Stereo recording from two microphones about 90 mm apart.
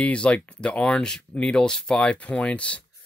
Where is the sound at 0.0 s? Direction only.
15° left (ahead or behind).